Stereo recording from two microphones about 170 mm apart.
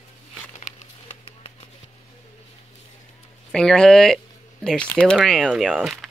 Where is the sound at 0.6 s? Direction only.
40° left (ahead or behind).